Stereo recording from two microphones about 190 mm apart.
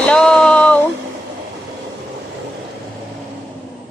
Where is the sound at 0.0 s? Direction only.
5° left (ahead or behind).